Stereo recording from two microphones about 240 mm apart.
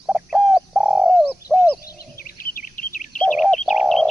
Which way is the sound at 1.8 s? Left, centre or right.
Left.